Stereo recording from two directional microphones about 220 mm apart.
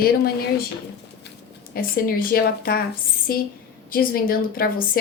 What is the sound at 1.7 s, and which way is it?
A woman's voice, 40° left (ahead or behind).